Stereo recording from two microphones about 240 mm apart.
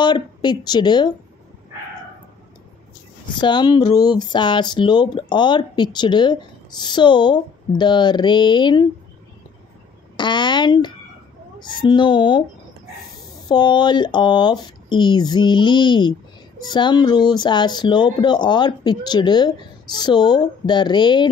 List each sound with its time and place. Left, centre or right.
0.0 s speech: centre
3.3 s speech: centre
10.1 s speech: centre
13.5 s speech: centre